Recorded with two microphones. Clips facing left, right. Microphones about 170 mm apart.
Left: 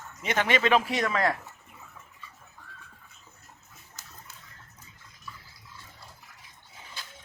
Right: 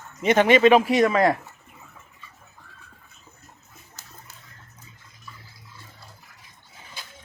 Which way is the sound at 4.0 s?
30° right (ahead or behind).